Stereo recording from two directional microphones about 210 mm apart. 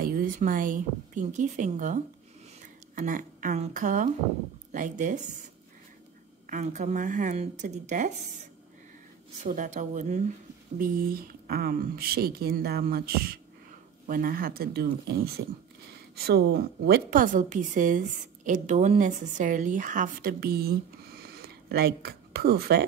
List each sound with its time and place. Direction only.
0.0 s speech: 45° right (ahead or behind)
3.0 s a woman's voice: 40° right (ahead or behind)
6.5 s a woman's voice: 35° right (ahead or behind)